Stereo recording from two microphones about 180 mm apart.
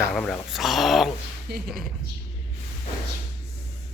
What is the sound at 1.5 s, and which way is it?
Speech, 60° right (ahead or behind).